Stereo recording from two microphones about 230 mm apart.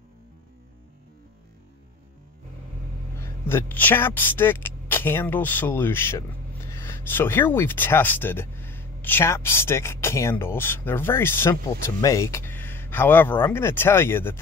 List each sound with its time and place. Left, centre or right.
3.2 s speech: centre